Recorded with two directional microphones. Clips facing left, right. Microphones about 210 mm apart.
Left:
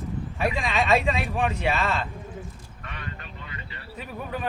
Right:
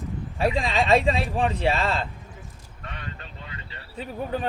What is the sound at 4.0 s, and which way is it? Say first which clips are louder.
Speech: right 4 dB; 30° right (ahead or behind).